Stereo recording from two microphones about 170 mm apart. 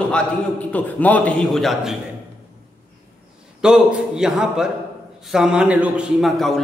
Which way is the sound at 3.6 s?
5° right (ahead or behind).